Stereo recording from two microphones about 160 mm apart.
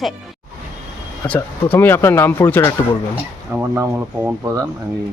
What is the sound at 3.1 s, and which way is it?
Speech, 10° right (ahead or behind).